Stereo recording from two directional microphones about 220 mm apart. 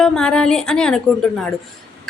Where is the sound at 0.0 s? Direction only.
5° left (ahead or behind).